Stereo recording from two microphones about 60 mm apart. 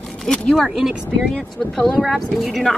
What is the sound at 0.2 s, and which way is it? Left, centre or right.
Speech, centre.